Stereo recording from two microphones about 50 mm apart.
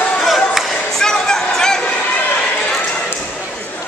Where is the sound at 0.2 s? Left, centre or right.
Centre.